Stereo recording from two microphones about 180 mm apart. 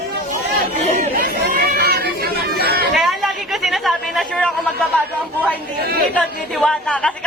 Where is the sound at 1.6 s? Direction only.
60° right (ahead or behind).